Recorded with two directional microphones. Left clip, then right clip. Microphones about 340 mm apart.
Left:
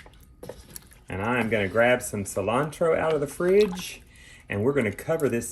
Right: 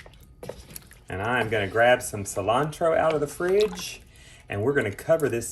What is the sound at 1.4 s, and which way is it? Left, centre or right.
Speech, centre.